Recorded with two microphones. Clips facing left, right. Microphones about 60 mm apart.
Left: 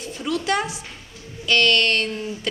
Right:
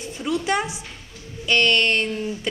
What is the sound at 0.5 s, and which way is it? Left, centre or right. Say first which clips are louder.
A woman's voice: even; centre.